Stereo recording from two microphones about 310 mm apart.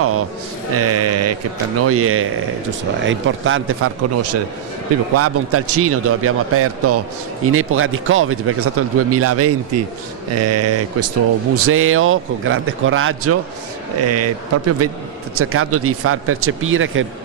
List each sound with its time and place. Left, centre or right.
0.7 s sheep: right
1.8 s a man's voice: right